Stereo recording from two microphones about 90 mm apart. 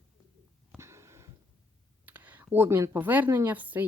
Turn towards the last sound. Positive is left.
turn(degrees=-20)  # may be behind; listen again after turning